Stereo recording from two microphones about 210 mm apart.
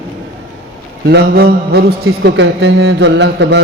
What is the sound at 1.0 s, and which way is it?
A man's voice, 50° right (ahead or behind).